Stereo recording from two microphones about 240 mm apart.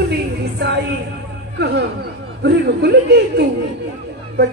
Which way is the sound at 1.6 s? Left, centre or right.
Right.